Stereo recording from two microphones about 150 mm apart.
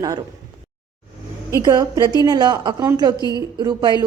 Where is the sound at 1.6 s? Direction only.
25° right (ahead or behind).